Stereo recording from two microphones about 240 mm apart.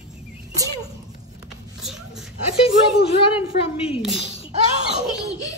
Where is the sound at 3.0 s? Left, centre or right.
Left.